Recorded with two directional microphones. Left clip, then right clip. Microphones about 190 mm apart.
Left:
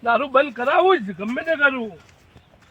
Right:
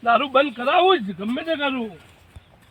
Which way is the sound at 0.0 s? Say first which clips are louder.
Even; 15° left (ahead or behind).